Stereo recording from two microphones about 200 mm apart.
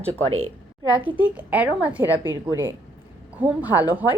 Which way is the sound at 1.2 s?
10° right (ahead or behind).